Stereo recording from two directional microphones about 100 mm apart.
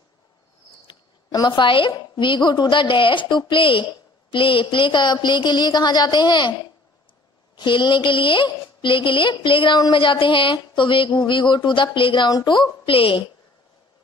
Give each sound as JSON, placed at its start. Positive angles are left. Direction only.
{"t": 0.8, "sound": "a sound", "side_deg": 50}
{"t": 1.9, "sound": "a woman's voice", "side_deg": 50}
{"t": 7.5, "sound": "a woman's voice", "side_deg": 50}
{"t": 12.3, "sound": "a woman's voice", "side_deg": 45}